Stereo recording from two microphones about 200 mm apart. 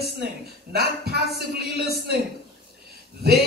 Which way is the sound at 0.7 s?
50° right (ahead or behind).